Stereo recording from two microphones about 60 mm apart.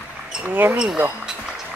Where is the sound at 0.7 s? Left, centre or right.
Centre.